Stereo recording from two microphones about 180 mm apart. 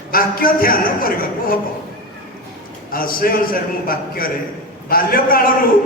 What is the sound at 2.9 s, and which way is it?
A man's voice, 55° left (ahead or behind).